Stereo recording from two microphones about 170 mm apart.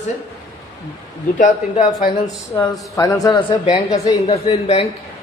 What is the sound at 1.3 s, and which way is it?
Speech, 50° left (ahead or behind).